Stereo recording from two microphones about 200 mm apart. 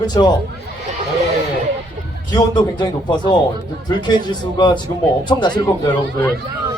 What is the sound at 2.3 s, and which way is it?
Speech, 20° left (ahead or behind).